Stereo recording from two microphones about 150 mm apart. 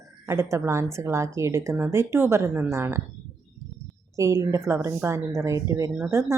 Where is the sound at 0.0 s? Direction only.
20° right (ahead or behind).